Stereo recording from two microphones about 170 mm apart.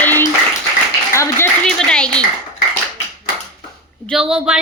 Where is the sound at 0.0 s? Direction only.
10° left (ahead or behind).